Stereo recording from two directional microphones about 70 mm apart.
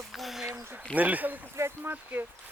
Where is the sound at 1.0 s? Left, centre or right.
Right.